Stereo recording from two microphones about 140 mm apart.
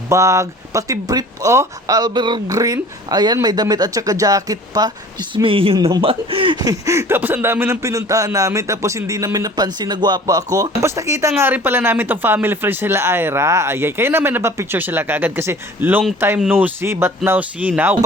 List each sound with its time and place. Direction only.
0.1 s speech: 20° right (ahead or behind)
5.3 s speech: 40° right (ahead or behind); by 17.9 s 10° right (ahead or behind)